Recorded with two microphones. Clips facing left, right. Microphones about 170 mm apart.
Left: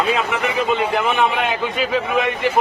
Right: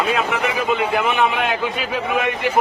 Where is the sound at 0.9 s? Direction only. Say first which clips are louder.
Even; centre (ahead or behind).